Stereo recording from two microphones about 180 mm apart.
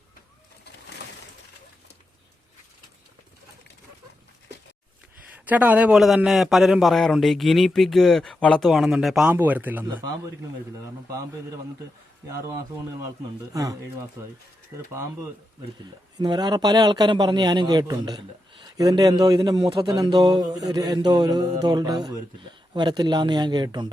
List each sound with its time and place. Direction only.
5.3 s a man's voice: 10° right (ahead or behind)
9.9 s speech: 20° right (ahead or behind)
13.1 s speech: 20° right (ahead or behind)
16.1 s speech: 25° right (ahead or behind)